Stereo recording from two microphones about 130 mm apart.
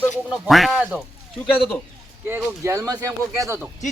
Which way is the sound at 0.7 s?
10° right (ahead or behind).